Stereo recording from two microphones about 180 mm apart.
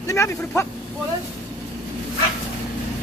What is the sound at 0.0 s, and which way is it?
Speech, 15° left (ahead or behind).